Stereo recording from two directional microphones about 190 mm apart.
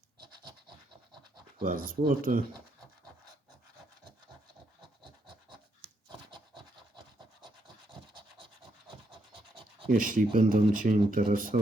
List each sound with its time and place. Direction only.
1.6 s speech: 45° right (ahead or behind)
5.0 s a sound: 25° right (ahead or behind)
6.1 s rub: 25° right (ahead or behind)
9.3 s scratch: 25° right (ahead or behind)
9.9 s speech: 45° right (ahead or behind)